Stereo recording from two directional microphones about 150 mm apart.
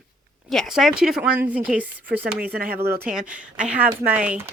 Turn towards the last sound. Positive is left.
turn(degrees=-10)  # may be behind; listen again after turning